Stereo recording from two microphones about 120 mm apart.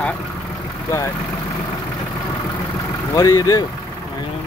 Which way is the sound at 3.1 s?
30° left (ahead or behind).